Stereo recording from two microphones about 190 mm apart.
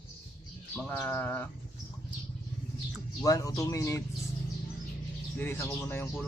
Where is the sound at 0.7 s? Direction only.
10° left (ahead or behind).